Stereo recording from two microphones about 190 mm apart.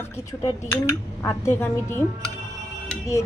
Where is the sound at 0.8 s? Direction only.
15° left (ahead or behind).